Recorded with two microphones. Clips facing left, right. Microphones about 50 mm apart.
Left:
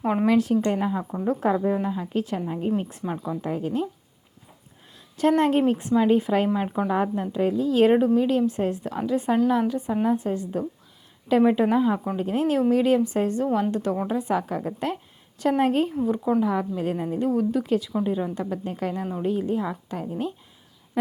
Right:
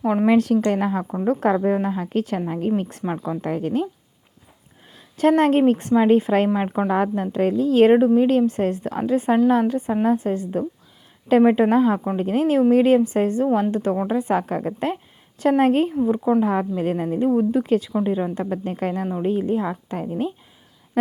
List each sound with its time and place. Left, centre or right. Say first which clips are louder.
0.3 s a woman's voice: right 3 dB; right
2.5 s a woman's voice: right 3 dB; right
4.9 s a sound: right 4 dB; right
5.4 s a woman's voice: right 4 dB; right
7.9 s speech: right 4 dB; right
16.0 s speech: right 4 dB; right
16.4 s speech: right 3 dB; right
19.1 s speech: right 3 dB; right